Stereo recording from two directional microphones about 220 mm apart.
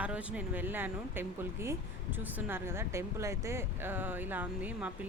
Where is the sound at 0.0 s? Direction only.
5° right (ahead or behind).